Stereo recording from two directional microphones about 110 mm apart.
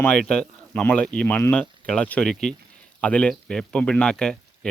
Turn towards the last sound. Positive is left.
turn(degrees=5)  # may be behind; listen again after turning